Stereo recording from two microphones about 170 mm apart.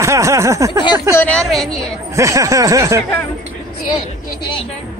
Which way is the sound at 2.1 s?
20° right (ahead or behind).